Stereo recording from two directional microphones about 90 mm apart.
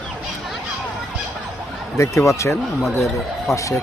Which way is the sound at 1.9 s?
30° left (ahead or behind).